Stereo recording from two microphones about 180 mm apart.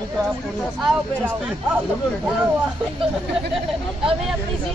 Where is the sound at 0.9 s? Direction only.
5° right (ahead or behind).